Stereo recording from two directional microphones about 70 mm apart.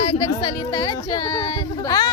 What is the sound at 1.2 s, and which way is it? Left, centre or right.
Speech, left.